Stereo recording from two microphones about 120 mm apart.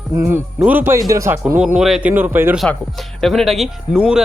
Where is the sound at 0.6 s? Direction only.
15° right (ahead or behind).